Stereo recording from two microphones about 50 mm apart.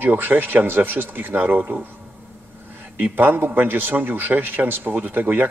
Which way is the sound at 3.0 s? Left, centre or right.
Right.